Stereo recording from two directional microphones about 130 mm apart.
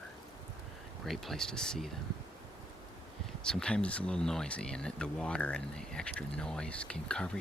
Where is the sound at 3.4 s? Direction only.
5° left (ahead or behind).